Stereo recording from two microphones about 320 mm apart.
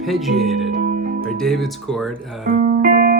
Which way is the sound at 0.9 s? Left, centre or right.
Right.